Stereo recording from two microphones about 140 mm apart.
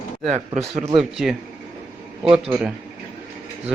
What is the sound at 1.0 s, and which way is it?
Speech, centre (ahead or behind).